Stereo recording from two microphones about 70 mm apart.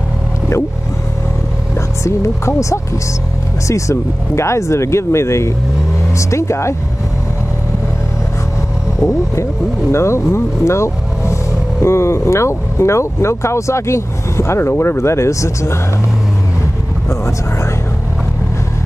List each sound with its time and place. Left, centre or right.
2.0 s speech: left
9.0 s speech: left